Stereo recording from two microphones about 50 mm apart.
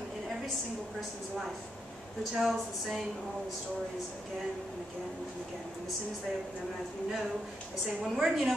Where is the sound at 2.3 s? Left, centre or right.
Centre.